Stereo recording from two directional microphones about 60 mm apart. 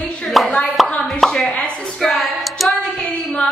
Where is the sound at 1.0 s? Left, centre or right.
Centre.